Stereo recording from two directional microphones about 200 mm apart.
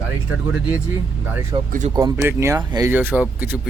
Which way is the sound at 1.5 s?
20° right (ahead or behind).